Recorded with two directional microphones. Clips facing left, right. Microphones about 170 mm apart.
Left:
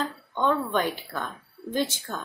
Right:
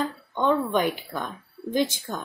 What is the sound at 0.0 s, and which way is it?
A woman's voice, 15° right (ahead or behind).